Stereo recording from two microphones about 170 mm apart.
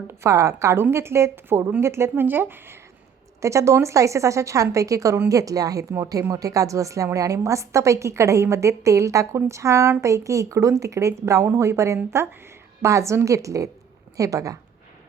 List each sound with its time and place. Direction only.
0.1 s a woman's voice: 15° right (ahead or behind)